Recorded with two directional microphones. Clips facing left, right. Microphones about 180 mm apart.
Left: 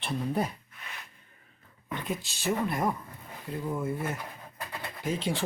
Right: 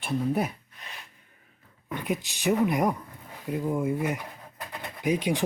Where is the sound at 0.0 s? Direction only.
10° right (ahead or behind).